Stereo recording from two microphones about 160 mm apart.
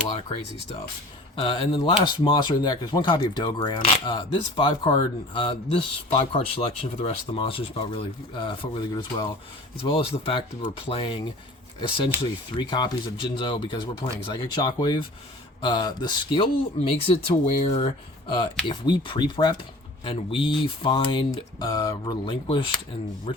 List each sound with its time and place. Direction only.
0.2 s speech: 35° left (ahead or behind)